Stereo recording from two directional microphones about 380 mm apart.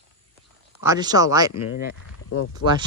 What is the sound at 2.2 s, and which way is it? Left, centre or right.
Speech, left.